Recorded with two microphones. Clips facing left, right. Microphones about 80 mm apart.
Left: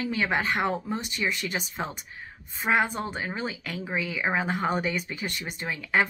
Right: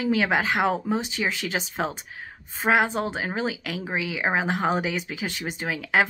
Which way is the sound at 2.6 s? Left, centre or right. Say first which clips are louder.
Right 3 dB; right.